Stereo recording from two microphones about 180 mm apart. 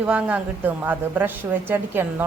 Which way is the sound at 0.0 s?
5° right (ahead or behind).